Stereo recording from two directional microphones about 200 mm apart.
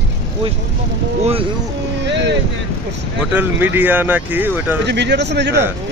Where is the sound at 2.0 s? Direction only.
60° right (ahead or behind).